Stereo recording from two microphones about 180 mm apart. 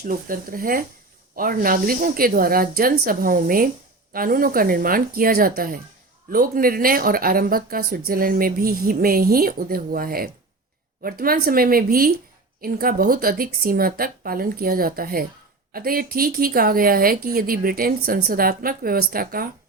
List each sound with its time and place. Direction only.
0.0 s a woman's voice: 50° right (ahead or behind)